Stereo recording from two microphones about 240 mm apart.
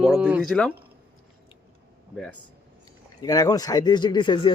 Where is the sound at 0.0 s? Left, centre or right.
Centre.